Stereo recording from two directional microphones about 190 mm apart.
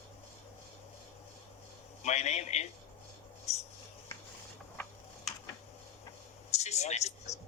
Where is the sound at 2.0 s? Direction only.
35° left (ahead or behind).